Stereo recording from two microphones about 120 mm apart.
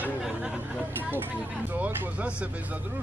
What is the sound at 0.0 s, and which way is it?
Chatter, 10° right (ahead or behind).